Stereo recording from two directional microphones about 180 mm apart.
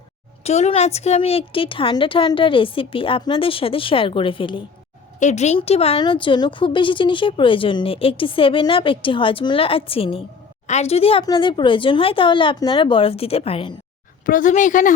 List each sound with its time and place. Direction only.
0.4 s a woman's voice: 35° left (ahead or behind)
5.2 s a woman's voice: 40° left (ahead or behind)
14.3 s a woman's voice: 45° left (ahead or behind)